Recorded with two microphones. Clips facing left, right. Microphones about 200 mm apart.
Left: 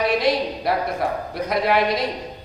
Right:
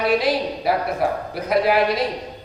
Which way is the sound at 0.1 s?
5° right (ahead or behind).